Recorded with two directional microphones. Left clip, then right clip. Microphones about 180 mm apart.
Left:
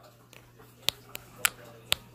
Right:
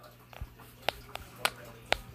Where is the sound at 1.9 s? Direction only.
65° left (ahead or behind).